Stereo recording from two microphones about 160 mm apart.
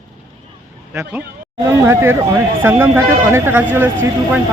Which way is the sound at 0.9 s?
10° right (ahead or behind).